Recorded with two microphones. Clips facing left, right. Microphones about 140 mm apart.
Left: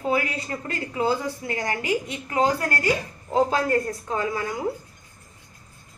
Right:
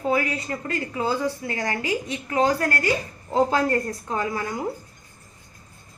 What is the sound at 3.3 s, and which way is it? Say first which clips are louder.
A woman's voice: even; 5° left (ahead or behind).